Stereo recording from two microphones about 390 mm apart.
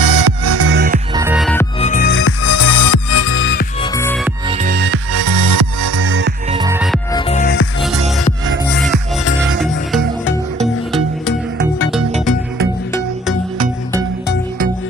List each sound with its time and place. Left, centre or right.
0.0 s music: right
0.4 s music: right
1.1 s music: centre
1.8 s music: centre
2.5 s music: left
3.8 s music: centre
4.4 s music: centre
5.1 s music: right
6.0 s music: right
6.5 s music: centre
7.2 s music: centre
9.4 s music: centre